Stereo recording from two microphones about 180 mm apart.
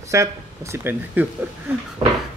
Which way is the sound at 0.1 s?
15° right (ahead or behind).